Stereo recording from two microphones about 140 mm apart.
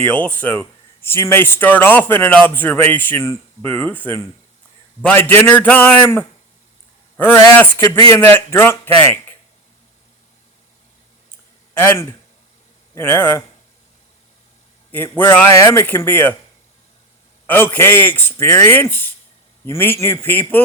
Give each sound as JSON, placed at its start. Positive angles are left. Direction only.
{"t": 0.0, "sound": "a man's voice", "side_deg": 10}
{"t": 12.9, "sound": "a man's voice", "side_deg": 15}
{"t": 14.9, "sound": "a man's voice", "side_deg": 15}
{"t": 17.4, "sound": "a man's voice", "side_deg": 15}